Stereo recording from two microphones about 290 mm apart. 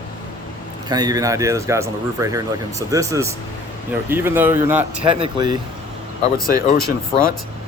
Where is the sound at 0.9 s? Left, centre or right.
Centre.